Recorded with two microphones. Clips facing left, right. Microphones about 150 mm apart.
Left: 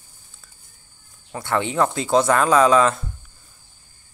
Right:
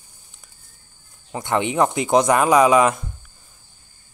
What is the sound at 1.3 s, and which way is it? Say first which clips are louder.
Speech: right 2 dB; 20° right (ahead or behind).